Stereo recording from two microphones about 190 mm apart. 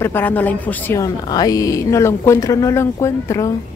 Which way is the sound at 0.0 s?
10° left (ahead or behind).